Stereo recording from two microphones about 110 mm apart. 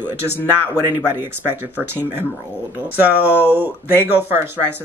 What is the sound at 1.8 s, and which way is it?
Speech, 20° right (ahead or behind).